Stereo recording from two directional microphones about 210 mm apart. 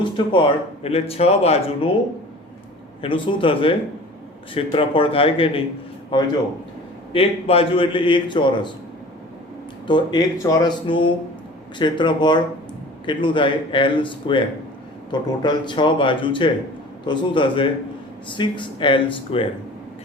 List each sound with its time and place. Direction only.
0.0 s speech: 25° left (ahead or behind)
3.0 s speech: 25° left (ahead or behind)
9.8 s speech: 20° left (ahead or behind)